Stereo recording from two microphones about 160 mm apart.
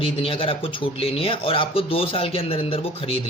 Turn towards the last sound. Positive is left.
turn(degrees=35)  # may be behind; listen again after turning